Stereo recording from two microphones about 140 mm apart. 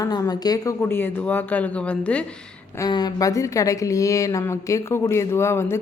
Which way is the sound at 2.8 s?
30° left (ahead or behind).